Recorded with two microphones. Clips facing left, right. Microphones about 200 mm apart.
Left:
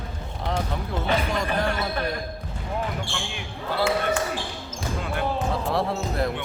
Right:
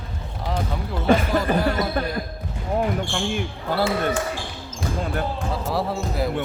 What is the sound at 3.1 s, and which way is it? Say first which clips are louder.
Speech: right 8 dB; 50° right (ahead or behind).